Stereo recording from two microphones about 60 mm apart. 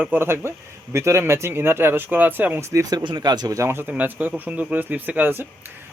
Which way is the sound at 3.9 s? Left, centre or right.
Right.